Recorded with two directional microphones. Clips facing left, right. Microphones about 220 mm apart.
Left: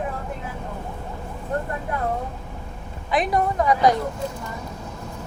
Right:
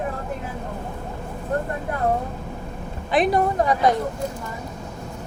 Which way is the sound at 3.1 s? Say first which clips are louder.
Right 3 dB; 30° right (ahead or behind).